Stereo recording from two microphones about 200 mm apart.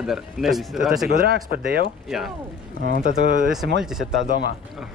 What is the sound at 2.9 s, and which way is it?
Speech, 45° right (ahead or behind).